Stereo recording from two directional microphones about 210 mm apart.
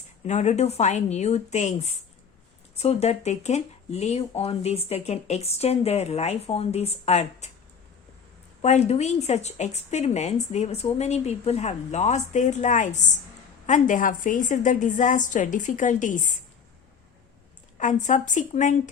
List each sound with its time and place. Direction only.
0.3 s speech: 35° left (ahead or behind)
8.6 s speech: 30° left (ahead or behind)
17.7 s speech: 35° left (ahead or behind)